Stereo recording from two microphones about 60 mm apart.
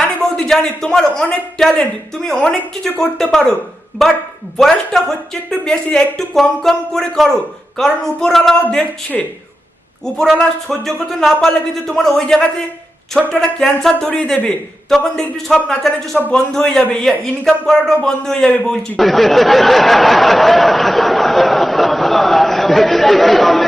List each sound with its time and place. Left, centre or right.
0.2 s a man's voice: centre